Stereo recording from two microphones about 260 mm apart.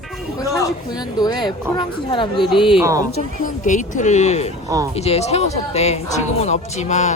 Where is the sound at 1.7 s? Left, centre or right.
Centre.